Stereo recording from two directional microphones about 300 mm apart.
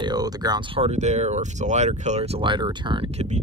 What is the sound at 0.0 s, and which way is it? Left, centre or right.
Speech, centre.